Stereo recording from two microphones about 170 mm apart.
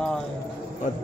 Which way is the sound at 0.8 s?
45° left (ahead or behind).